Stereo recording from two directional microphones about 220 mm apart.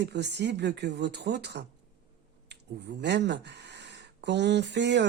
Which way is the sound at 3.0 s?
50° right (ahead or behind).